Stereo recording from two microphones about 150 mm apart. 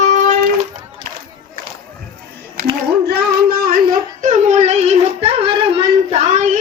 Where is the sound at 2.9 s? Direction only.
90° right; by 6.6 s 55° right (ahead or behind).